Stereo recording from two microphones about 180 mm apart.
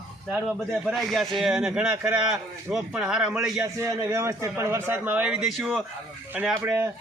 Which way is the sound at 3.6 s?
15° right (ahead or behind).